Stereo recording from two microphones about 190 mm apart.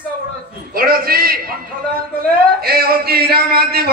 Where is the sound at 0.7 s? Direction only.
50° right (ahead or behind).